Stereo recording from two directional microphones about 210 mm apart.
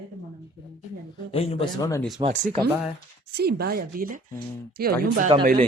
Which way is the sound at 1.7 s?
15° left (ahead or behind).